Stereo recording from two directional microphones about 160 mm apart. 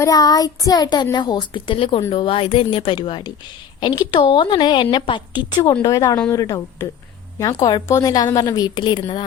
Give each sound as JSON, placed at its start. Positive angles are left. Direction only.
{"t": 0.0, "sound": "a woman's voice", "side_deg": 25}